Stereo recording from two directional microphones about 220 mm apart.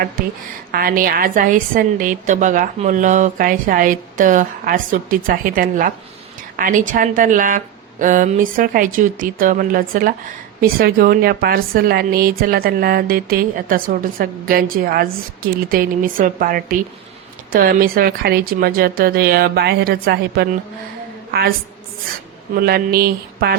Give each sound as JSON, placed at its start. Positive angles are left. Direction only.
{"t": 0.2, "sound": "a woman's voice", "side_deg": -40}
{"t": 22.5, "sound": "speech", "side_deg": -45}